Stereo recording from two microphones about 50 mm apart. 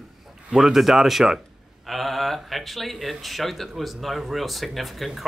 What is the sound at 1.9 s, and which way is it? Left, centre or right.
Speech, centre.